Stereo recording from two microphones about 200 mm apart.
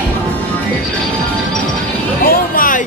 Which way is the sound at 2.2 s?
45° left (ahead or behind).